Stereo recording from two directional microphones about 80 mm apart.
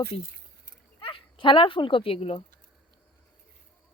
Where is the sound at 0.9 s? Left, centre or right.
Left.